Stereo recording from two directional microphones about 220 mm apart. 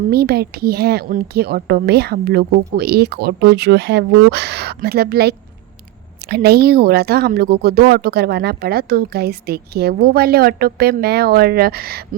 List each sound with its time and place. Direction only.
0.1 s speech: 45° right (ahead or behind)